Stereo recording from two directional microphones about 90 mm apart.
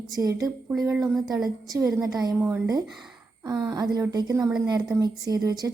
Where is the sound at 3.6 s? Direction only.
45° right (ahead or behind).